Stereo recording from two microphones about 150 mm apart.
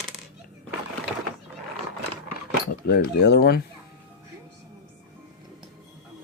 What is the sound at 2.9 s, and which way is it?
Speech, 90° left.